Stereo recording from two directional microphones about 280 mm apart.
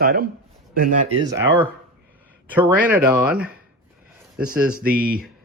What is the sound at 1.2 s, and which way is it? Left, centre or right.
Speech, centre.